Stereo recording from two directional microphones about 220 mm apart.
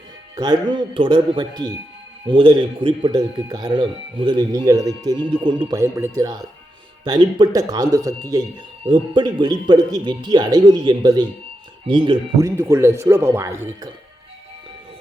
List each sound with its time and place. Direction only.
0.3 s speech: 20° right (ahead or behind)